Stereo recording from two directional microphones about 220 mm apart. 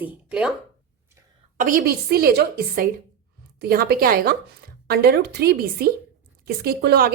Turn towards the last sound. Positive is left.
turn(degrees=-45)  # may be behind; listen again after turning